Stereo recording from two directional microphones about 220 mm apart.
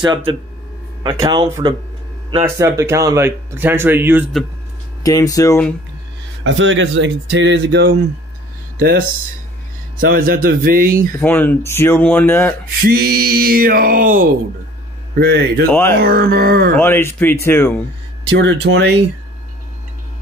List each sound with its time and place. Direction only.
0.0 s speech: 20° right (ahead or behind); by 4.5 s 5° right (ahead or behind)
5.0 s speech: 15° left (ahead or behind)
6.4 s speech: 60° right (ahead or behind)
9.9 s a sound: 40° right (ahead or behind)
11.1 s speech: 10° left (ahead or behind)
12.8 s a sound: 45° right (ahead or behind)
15.1 s speech: 50° right (ahead or behind)
15.7 s speech: 10° left (ahead or behind)
16.0 s speech: 45° right (ahead or behind)
16.7 s speech: 10° left (ahead or behind)
18.4 s speech: 50° right (ahead or behind)